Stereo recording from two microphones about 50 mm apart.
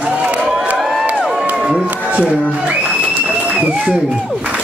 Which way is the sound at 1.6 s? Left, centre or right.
Centre.